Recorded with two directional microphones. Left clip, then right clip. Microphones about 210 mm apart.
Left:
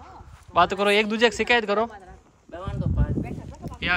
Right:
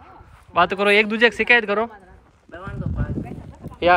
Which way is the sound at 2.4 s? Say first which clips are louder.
Even; 45° left (ahead or behind).